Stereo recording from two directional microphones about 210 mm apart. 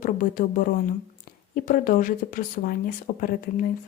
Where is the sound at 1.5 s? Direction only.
40° left (ahead or behind).